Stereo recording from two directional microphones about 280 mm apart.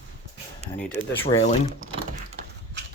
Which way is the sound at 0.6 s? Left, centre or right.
Right.